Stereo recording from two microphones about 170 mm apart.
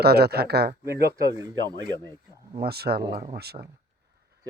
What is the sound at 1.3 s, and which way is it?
Speech, 20° right (ahead or behind).